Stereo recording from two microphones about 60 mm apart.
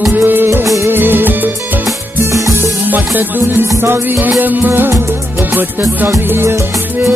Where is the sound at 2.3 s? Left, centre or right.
Right.